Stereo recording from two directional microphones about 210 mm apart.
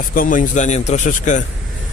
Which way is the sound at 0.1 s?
40° left (ahead or behind).